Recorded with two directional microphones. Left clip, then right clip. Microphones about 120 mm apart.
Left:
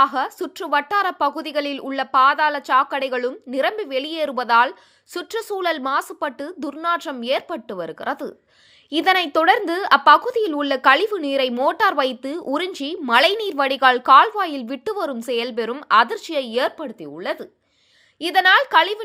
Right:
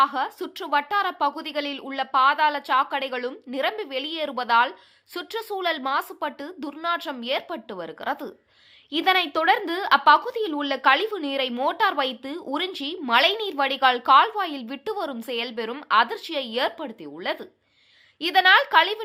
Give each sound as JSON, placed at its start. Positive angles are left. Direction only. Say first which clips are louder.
{"t": 0.0, "sound": "a woman's voice", "louder": "left 4 dB", "side_deg": 50}
{"t": 16.7, "sound": "speech", "louder": "left 4 dB", "side_deg": 25}